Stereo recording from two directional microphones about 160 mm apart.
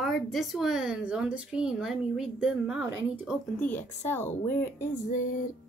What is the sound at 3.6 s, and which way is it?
Speech, 10° left (ahead or behind).